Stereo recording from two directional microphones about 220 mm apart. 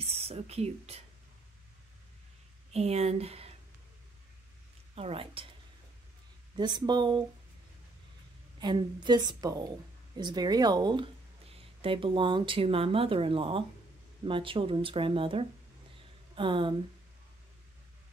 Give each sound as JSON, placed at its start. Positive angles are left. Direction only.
{"t": 0.0, "sound": "speech", "side_deg": -25}
{"t": 2.7, "sound": "speech", "side_deg": -30}
{"t": 4.9, "sound": "speech", "side_deg": -25}
{"t": 6.5, "sound": "speech", "side_deg": -20}
{"t": 8.5, "sound": "speech", "side_deg": -20}